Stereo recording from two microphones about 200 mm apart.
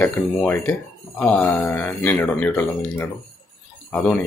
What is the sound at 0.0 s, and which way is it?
Speech, 10° left (ahead or behind).